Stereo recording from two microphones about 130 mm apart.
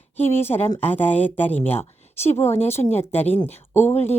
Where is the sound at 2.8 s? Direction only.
30° left (ahead or behind).